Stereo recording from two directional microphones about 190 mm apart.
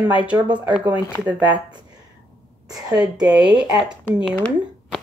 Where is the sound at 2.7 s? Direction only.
20° right (ahead or behind).